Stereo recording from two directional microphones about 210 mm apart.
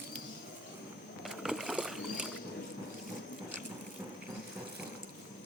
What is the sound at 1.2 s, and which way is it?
Rowboat, centre (ahead or behind).